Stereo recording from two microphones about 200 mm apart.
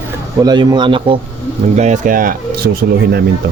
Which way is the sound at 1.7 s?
35° right (ahead or behind).